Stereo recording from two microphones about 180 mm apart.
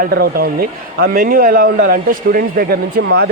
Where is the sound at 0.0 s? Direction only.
60° right (ahead or behind).